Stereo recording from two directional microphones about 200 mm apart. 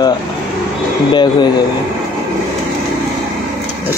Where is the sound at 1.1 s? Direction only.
20° left (ahead or behind).